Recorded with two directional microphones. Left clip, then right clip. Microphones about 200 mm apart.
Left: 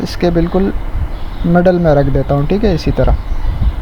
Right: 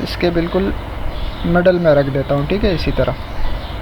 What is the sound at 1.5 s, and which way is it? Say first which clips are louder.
Speech: left 1 dB; 45° left (ahead or behind).